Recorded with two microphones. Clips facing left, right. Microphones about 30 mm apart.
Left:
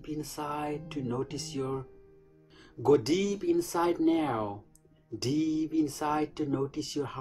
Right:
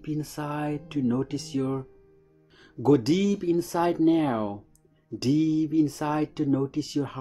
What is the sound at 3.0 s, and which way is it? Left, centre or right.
Speech, right.